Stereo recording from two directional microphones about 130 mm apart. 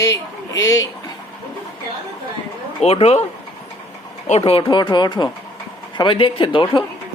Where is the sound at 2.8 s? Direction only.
50° left (ahead or behind).